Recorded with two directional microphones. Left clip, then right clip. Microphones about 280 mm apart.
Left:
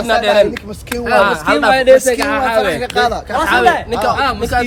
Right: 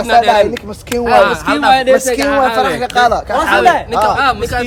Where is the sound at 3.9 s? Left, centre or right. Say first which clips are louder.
Right 3 dB; centre.